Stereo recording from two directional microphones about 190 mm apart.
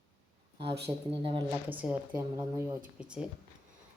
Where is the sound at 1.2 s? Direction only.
25° right (ahead or behind).